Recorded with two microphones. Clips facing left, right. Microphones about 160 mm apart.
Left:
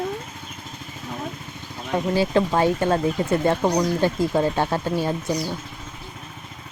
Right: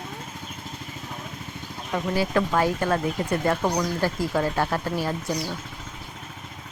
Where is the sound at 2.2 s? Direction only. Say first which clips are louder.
Left 3 dB; 25° left (ahead or behind).